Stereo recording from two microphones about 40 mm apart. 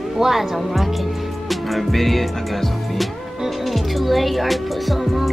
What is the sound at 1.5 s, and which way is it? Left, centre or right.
Music, centre.